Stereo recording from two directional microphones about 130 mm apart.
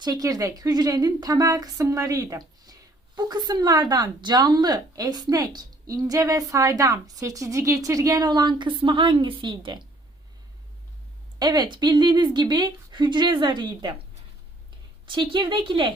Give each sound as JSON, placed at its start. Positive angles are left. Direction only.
{"t": 0.0, "sound": "speech", "side_deg": -30}
{"t": 11.3, "sound": "speech", "side_deg": -30}
{"t": 15.0, "sound": "speech", "side_deg": -40}